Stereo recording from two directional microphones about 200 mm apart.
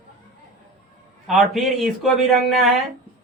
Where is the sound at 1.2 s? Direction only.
Centre (ahead or behind).